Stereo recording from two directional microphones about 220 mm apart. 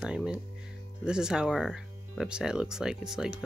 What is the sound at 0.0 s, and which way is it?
Music, 5° right (ahead or behind).